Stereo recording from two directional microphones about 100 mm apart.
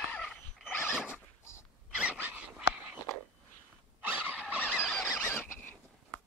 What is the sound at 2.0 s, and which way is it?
Dog, 15° right (ahead or behind).